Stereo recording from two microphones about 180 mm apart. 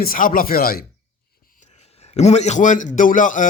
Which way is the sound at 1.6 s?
35° left (ahead or behind).